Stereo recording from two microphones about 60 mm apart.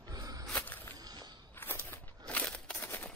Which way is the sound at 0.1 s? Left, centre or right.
Right.